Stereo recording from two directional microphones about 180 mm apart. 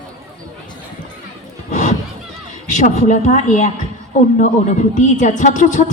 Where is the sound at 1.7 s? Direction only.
45° left (ahead or behind).